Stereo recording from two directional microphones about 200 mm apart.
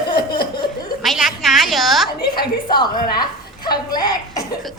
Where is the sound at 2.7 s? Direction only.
20° left (ahead or behind).